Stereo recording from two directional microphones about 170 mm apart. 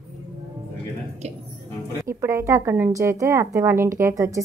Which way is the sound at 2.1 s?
15° right (ahead or behind).